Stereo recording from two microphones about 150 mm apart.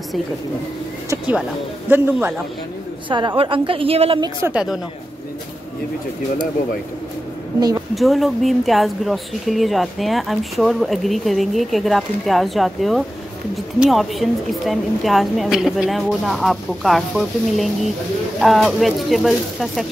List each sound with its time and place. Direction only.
1.1 s speech: 10° right (ahead or behind)
3.1 s a woman's voice: 30° right (ahead or behind)
4.5 s speech: 5° right (ahead or behind)
7.9 s speech: centre (ahead or behind)